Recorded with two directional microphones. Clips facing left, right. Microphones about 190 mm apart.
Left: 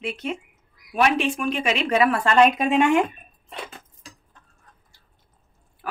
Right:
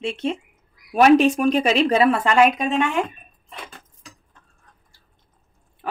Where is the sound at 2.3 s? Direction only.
5° right (ahead or behind).